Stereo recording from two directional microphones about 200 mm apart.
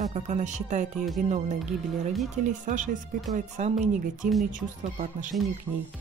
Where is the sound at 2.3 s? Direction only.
40° right (ahead or behind).